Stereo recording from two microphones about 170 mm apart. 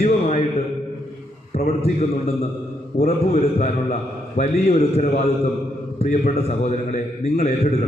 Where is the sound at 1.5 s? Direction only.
40° left (ahead or behind).